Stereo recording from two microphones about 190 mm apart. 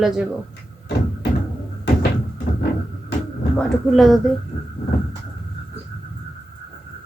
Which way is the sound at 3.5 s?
Centre (ahead or behind).